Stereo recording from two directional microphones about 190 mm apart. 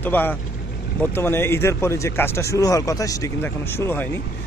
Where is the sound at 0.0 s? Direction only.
10° left (ahead or behind).